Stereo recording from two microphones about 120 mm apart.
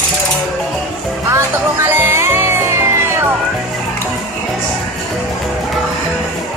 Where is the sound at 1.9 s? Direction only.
20° right (ahead or behind).